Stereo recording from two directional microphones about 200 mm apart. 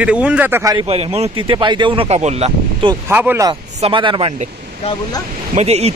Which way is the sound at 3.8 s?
25° right (ahead or behind).